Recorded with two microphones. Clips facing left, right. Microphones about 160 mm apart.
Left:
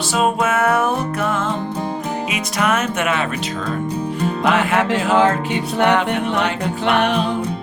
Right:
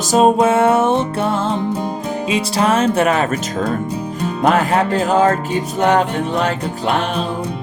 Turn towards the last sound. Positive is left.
turn(degrees=70)  # may be behind; listen again after turning